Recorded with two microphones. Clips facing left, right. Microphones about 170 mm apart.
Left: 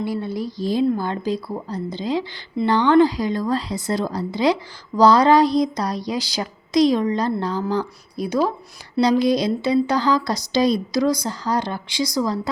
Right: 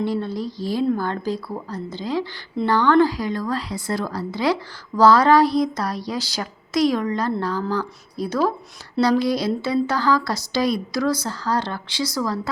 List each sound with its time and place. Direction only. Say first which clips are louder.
0.0 s a woman's voice: right 1 dB; 10° left (ahead or behind)